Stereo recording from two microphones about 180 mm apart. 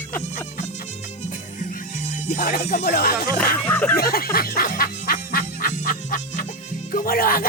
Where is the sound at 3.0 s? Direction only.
60° left (ahead or behind).